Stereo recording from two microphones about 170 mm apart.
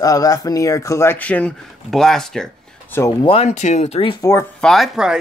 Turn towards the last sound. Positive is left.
turn(degrees=0)  # may be behind; listen again after turning